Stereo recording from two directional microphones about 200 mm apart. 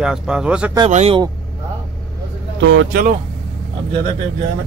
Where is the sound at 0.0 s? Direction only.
5° right (ahead or behind).